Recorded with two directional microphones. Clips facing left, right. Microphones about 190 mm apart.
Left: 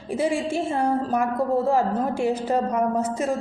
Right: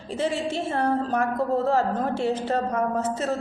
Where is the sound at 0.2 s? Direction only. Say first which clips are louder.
Left 2 dB; 10° left (ahead or behind).